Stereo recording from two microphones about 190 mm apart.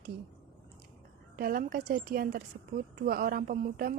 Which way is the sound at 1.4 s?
50° right (ahead or behind).